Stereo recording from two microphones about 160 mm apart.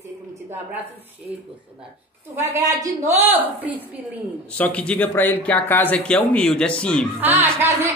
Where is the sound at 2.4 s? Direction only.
20° right (ahead or behind).